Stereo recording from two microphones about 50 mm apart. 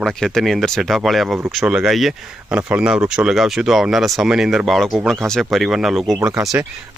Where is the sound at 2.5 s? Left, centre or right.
Right.